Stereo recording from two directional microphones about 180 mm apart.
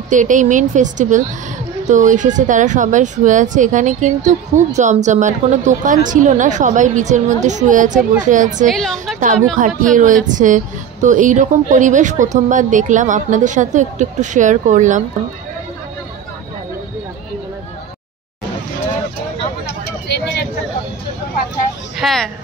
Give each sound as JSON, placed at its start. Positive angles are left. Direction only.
{"t": 0.1, "sound": "a woman's voice", "side_deg": -45}
{"t": 8.6, "sound": "a woman's voice", "side_deg": 0}
{"t": 8.9, "sound": "a woman's voice", "side_deg": -45}
{"t": 19.8, "sound": "a sound", "side_deg": 65}
{"t": 21.9, "sound": "music", "side_deg": 0}